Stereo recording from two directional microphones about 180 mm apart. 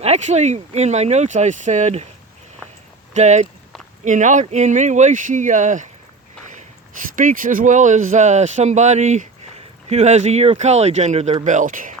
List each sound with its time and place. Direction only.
0.0 s speech: 35° right (ahead or behind)
3.1 s speech: 40° right (ahead or behind)
7.2 s speech: 50° right (ahead or behind)